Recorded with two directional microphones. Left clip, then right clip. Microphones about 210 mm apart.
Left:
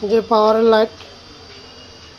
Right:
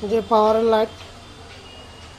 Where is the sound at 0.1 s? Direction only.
30° left (ahead or behind).